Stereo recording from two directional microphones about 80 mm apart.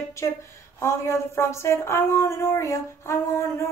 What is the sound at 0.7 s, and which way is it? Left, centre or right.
Speech, left.